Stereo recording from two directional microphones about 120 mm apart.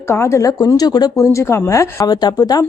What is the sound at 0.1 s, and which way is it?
A woman's voice, 25° left (ahead or behind).